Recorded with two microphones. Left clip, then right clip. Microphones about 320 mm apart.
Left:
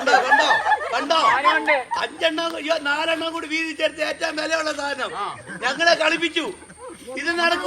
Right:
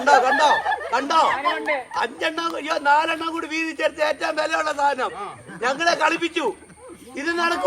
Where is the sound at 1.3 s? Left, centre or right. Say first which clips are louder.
Left 5 dB; left.